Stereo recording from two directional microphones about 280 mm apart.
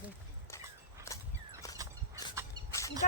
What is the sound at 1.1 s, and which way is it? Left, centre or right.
Horse, centre.